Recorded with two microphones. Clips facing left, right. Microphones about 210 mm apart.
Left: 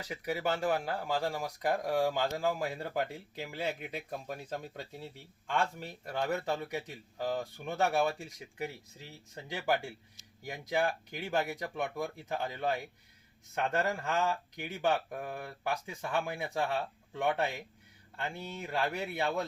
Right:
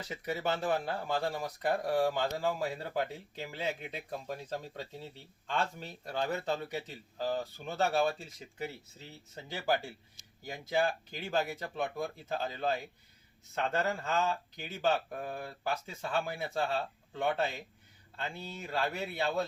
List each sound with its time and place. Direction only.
0.0 s speech: 10° left (ahead or behind)
13.8 s speech: 15° left (ahead or behind)